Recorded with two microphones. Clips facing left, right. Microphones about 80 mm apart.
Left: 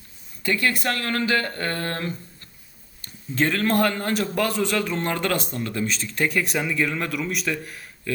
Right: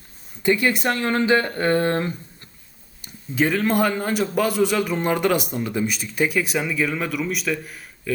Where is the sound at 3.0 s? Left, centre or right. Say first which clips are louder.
Right 2 dB; centre.